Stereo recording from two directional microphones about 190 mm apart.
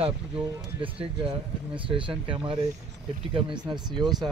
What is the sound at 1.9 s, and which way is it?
Speech, 25° right (ahead or behind).